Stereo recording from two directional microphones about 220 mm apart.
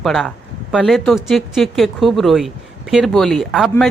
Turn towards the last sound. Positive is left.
turn(degrees=0)  # may be behind; listen again after turning